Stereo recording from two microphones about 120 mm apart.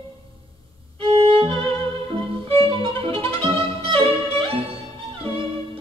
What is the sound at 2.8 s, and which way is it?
Violin, 50° right (ahead or behind).